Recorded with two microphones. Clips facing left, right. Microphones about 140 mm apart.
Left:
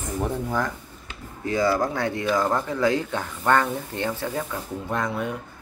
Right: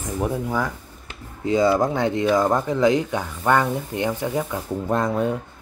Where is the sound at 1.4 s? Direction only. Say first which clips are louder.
Right 4 dB; 20° right (ahead or behind).